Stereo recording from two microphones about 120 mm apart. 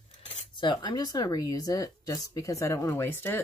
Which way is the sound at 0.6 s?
40° left (ahead or behind).